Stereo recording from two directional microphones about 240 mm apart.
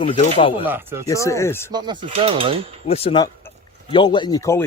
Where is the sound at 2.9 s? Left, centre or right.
Left.